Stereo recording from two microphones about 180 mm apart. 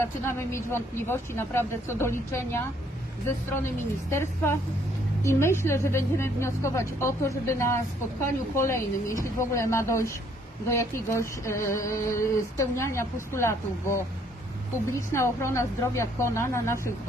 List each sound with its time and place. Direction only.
0.0 s a woman's voice: 15° left (ahead or behind)
4.1 s a woman's voice: 15° left (ahead or behind)